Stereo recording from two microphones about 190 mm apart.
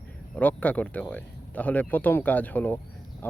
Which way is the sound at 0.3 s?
10° left (ahead or behind).